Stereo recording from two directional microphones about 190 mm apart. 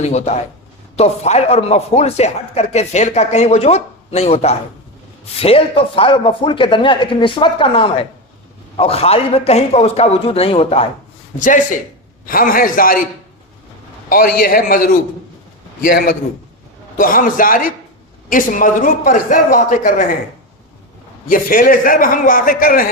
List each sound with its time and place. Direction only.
0.0 s speech: 35° left (ahead or behind)
11.3 s a man's voice: 45° left (ahead or behind)
14.1 s a man's voice: 50° left (ahead or behind)
21.2 s a man's voice: 45° left (ahead or behind)